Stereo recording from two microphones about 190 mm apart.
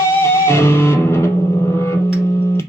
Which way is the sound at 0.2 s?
15° left (ahead or behind).